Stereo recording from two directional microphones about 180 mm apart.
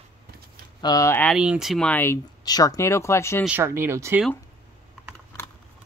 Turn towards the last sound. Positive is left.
turn(degrees=-15)  # may be behind; listen again after turning